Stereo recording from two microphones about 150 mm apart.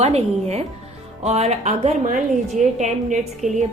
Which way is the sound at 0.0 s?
45° right (ahead or behind).